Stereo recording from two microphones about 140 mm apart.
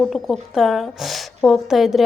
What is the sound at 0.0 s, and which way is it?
A woman's voice, centre (ahead or behind).